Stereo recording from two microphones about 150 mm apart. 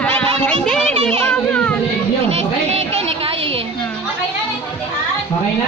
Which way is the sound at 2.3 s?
45° right (ahead or behind).